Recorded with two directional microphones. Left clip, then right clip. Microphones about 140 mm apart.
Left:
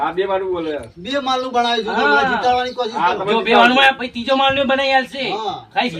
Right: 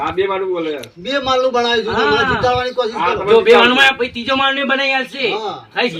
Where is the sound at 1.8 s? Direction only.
20° left (ahead or behind).